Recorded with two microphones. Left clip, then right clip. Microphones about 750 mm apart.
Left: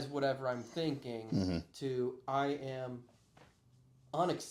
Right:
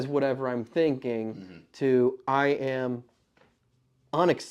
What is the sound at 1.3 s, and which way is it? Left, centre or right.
Speech, left.